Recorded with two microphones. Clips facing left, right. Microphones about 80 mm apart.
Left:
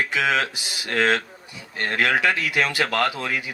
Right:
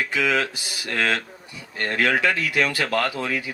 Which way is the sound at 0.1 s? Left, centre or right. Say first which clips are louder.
Even; left.